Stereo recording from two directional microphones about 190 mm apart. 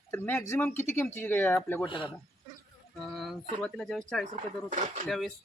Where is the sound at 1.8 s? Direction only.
25° left (ahead or behind).